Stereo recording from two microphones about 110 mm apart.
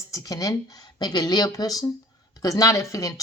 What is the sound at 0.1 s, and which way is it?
A woman's voice, 35° left (ahead or behind).